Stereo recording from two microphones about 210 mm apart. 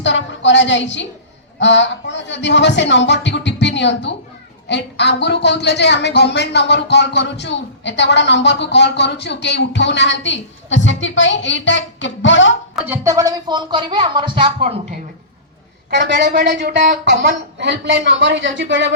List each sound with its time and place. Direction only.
0.0 s a woman's voice: 60° left (ahead or behind)
12.9 s speech: 15° right (ahead or behind)
16.0 s speech: 55° right (ahead or behind)